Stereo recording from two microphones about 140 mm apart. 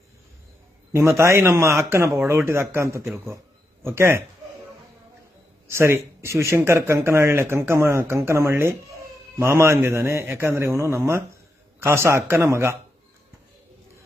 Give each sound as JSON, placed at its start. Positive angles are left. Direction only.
{"t": 0.9, "sound": "speech", "side_deg": -20}
{"t": 5.6, "sound": "speech", "side_deg": -20}